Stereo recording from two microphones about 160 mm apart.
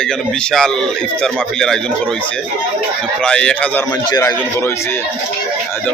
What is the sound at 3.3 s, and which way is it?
Speech, 5° left (ahead or behind).